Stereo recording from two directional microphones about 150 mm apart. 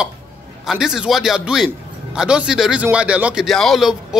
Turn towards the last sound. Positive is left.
turn(degrees=0)  # may be behind; listen again after turning